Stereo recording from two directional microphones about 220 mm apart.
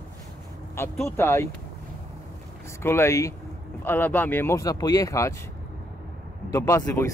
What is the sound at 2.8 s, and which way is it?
Speech, 10° left (ahead or behind).